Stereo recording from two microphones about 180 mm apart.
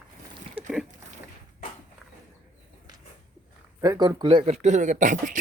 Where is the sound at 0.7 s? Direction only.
5° right (ahead or behind).